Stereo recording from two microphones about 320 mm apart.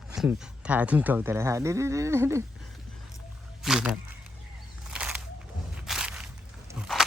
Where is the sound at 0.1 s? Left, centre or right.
Centre.